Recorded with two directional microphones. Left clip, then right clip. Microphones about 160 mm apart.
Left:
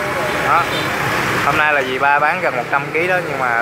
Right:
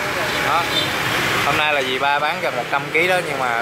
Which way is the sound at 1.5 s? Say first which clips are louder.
Left 3 dB; 10° right (ahead or behind).